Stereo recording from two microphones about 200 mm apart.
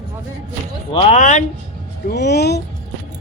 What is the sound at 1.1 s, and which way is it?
Speech, 40° left (ahead or behind).